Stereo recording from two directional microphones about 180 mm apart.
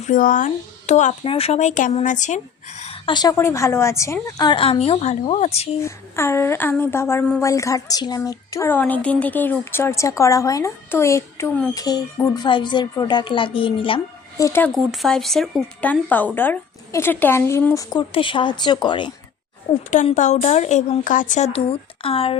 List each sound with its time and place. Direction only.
0.1 s speech: 45° left (ahead or behind)
3.1 s a woman's voice: 20° left (ahead or behind)
5.8 s speech: 15° left (ahead or behind)
11.7 s a woman's voice: 20° left (ahead or behind)
14.4 s speech: 15° left (ahead or behind)
14.7 s speech: centre (ahead or behind)
17.9 s a woman's voice: 30° left (ahead or behind)
19.9 s speech: 45° left (ahead or behind)